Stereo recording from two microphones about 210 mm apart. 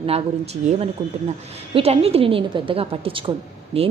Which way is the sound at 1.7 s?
30° right (ahead or behind).